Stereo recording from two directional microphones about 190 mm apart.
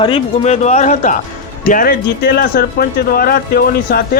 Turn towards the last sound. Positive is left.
turn(degrees=55)  # may be behind; listen again after turning